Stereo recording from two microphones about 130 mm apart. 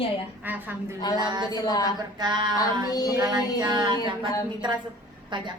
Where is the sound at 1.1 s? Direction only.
35° right (ahead or behind).